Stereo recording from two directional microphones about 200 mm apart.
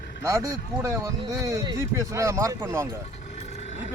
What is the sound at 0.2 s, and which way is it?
A man's voice, 15° right (ahead or behind).